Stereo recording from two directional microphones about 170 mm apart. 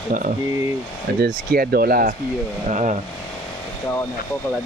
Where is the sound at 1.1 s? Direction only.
65° right (ahead or behind).